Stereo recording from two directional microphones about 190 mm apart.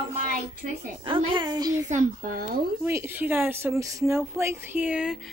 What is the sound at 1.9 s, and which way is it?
Speech, 45° right (ahead or behind).